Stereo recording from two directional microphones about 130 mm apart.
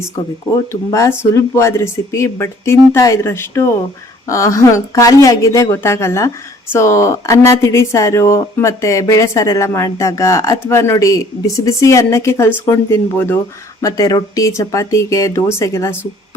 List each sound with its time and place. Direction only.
0.5 s speech: 25° left (ahead or behind)
13.8 s speech: 30° left (ahead or behind)